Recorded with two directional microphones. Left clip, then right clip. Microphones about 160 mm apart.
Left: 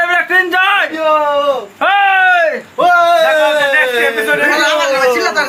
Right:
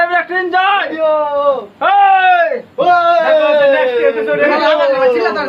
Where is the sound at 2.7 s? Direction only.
5° left (ahead or behind).